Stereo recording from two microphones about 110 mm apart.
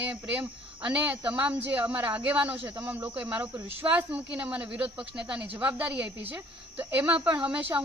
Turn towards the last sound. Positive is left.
turn(degrees=-15)  # may be behind; listen again after turning